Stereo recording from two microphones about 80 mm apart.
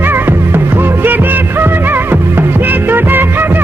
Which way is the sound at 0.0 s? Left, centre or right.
Right.